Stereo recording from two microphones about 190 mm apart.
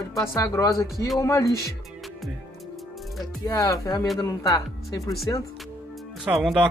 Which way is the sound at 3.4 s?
20° left (ahead or behind).